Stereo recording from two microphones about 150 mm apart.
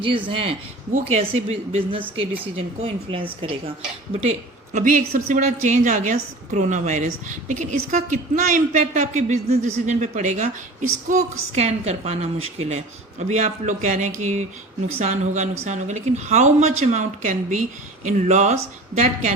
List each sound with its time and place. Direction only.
0.3 s speech: 35° right (ahead or behind)
2.0 s speech: 10° right (ahead or behind)
2.6 s speech: 40° right (ahead or behind)
4.7 s a woman's voice: 60° right (ahead or behind)